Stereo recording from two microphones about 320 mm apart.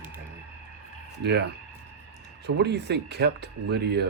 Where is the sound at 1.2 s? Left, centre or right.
Right.